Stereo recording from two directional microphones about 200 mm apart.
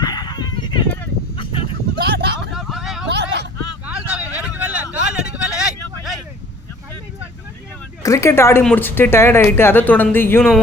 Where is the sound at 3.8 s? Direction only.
5° right (ahead or behind).